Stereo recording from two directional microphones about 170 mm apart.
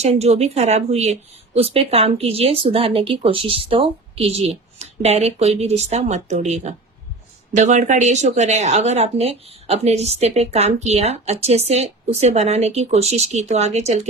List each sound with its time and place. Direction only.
0.0 s speech: 40° right (ahead or behind)